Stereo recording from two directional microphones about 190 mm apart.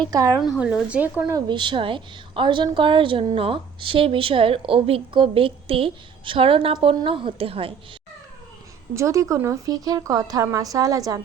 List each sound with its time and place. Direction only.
0.0 s a woman's voice: 20° right (ahead or behind)
0.6 s a woman's voice: 5° right (ahead or behind)
1.5 s a woman's voice: 25° right (ahead or behind)
9.0 s a woman's voice: 15° right (ahead or behind)